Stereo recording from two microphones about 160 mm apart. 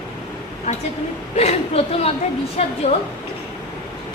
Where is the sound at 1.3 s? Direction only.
40° left (ahead or behind).